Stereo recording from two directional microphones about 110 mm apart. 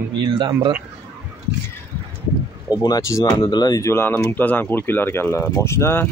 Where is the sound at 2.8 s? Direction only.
35° left (ahead or behind).